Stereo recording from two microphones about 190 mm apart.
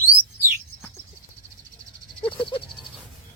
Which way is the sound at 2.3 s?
25° left (ahead or behind).